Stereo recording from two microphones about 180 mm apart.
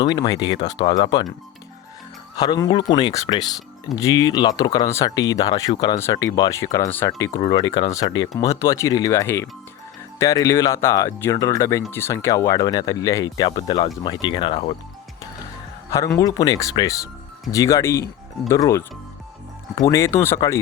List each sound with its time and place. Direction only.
0.0 s speech: 25° left (ahead or behind)
2.3 s speech: 20° left (ahead or behind)
15.9 s speech: 15° left (ahead or behind)